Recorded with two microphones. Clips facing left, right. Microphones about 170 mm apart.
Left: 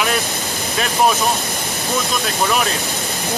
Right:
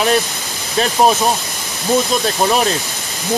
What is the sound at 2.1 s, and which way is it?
Speech, 35° right (ahead or behind).